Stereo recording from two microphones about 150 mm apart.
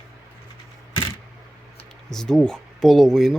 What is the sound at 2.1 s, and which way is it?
Speech, 5° left (ahead or behind).